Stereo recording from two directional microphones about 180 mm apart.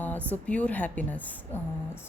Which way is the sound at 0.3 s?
5° left (ahead or behind).